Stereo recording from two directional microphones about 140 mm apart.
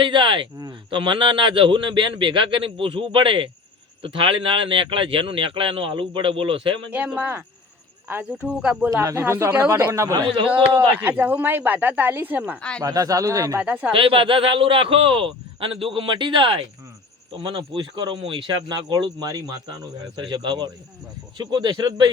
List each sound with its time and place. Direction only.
0.0 s a man's voice: 35° right (ahead or behind)
6.9 s speech: 10° right (ahead or behind)
8.9 s speech: 20° right (ahead or behind)
10.8 s speech: 10° right (ahead or behind)
12.8 s speech: 25° right (ahead or behind)
13.6 s speech: 10° right (ahead or behind)
13.9 s a man's voice: 40° right (ahead or behind)